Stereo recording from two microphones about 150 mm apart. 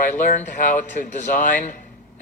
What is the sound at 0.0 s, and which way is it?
A man's voice, 60° left (ahead or behind).